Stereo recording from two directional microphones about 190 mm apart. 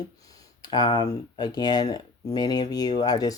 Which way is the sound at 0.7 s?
25° left (ahead or behind).